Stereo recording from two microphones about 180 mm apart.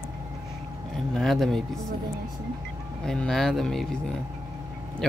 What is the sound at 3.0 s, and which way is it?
Speech, 5° left (ahead or behind).